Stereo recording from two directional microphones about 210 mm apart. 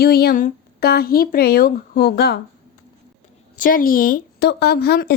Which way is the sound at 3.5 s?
40° left (ahead or behind).